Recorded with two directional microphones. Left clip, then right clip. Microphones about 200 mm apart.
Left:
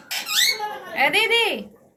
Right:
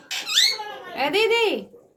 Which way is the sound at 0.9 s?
30° right (ahead or behind).